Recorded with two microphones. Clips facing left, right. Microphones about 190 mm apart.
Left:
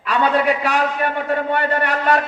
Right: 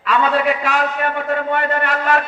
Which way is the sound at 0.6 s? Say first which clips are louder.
Even; 35° left (ahead or behind).